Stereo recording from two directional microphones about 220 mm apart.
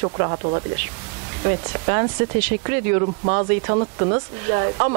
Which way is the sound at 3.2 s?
30° right (ahead or behind).